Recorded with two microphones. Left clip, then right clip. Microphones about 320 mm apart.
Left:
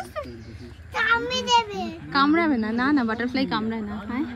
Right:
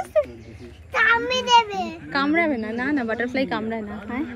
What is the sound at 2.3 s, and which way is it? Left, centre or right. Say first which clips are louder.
Speech: right 1 dB; left.